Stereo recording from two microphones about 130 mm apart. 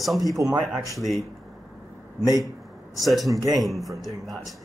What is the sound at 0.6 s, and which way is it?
Speech, centre (ahead or behind).